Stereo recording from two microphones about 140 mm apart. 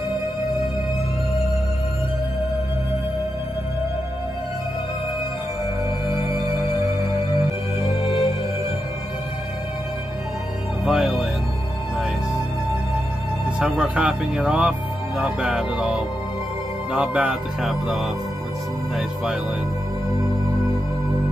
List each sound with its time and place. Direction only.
6.0 s music: 25° right (ahead or behind)
8.0 s music: 40° left (ahead or behind)
10.9 s music: centre (ahead or behind)
13.6 s speech: 10° right (ahead or behind)